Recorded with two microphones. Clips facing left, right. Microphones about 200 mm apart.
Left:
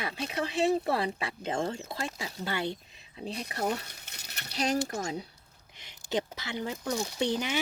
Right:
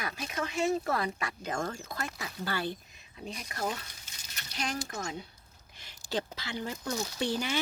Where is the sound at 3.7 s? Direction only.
65° left (ahead or behind).